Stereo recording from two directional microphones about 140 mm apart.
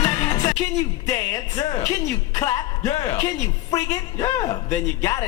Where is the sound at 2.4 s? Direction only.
25° left (ahead or behind).